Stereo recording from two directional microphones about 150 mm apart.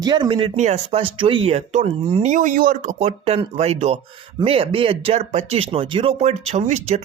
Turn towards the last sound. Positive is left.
turn(degrees=-45)  # may be behind; listen again after turning